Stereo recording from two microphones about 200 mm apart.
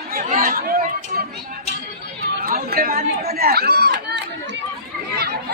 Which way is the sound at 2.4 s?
50° right (ahead or behind).